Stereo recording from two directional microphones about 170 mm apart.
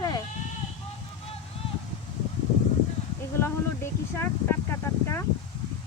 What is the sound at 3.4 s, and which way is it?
Speech, 15° left (ahead or behind).